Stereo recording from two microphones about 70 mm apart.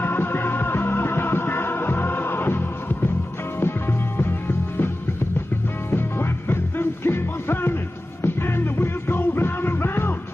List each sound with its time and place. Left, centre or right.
0.0 s music: left
4.2 s music: left